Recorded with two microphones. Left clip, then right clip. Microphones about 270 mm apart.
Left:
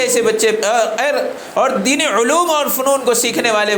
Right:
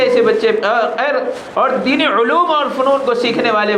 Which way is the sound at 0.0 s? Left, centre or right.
Left.